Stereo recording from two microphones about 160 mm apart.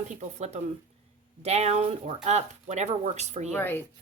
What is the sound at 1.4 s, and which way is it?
A woman's voice, 40° right (ahead or behind).